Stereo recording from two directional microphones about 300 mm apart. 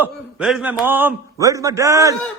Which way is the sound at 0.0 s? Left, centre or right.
Centre.